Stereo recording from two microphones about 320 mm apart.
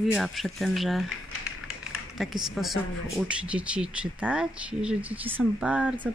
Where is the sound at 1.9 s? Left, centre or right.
Centre.